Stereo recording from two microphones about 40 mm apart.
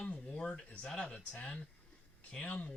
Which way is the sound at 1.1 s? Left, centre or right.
Left.